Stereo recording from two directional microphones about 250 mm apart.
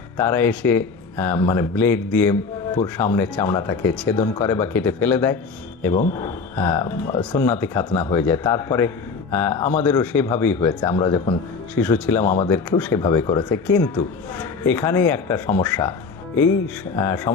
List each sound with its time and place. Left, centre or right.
0.2 s a man's voice: centre
5.9 s speech: left
6.1 s a man's voice: centre
17.0 s a man's voice: centre